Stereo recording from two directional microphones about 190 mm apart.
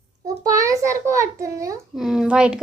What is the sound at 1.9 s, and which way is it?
Speech, centre (ahead or behind).